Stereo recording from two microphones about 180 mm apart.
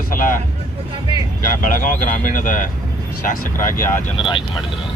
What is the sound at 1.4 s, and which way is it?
Speech, 45° left (ahead or behind).